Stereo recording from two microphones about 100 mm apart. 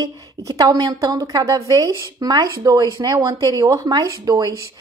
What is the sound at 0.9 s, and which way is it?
Speech, 35° right (ahead or behind).